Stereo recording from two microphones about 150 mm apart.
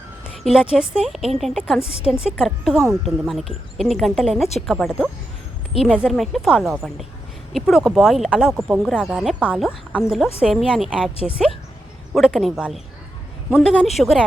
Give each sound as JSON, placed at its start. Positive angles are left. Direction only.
{"t": 0.3, "sound": "speech", "side_deg": -5}
{"t": 1.8, "sound": "a woman's voice", "side_deg": 40}
{"t": 2.4, "sound": "speech", "side_deg": 0}